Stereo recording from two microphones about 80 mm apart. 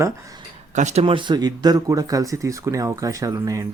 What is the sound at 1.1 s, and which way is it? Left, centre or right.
Speech, right.